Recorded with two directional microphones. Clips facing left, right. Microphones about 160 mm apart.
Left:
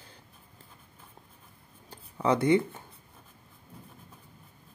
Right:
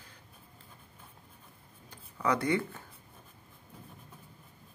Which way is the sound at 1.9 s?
25° left (ahead or behind).